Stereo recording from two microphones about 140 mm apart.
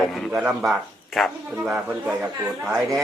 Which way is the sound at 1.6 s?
15° right (ahead or behind).